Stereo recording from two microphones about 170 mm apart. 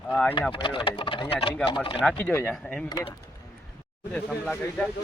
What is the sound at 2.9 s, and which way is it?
Speech, 25° left (ahead or behind).